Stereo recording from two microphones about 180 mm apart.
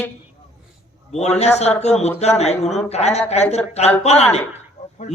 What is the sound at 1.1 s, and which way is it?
Speech, 35° left (ahead or behind).